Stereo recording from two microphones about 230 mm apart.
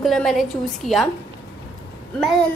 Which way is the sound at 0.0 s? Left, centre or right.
Centre.